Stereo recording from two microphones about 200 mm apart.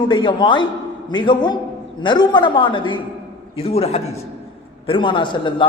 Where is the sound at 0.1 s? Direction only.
25° left (ahead or behind).